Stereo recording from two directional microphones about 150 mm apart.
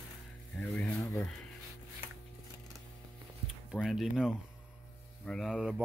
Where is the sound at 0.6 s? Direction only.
10° left (ahead or behind).